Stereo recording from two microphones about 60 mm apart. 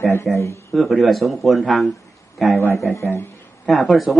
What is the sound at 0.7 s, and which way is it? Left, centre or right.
Speech, centre.